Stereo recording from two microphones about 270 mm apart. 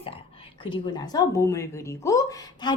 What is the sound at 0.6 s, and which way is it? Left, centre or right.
Speech, centre.